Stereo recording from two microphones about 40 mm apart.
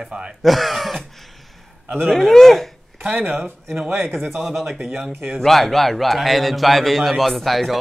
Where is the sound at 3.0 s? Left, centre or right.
Right.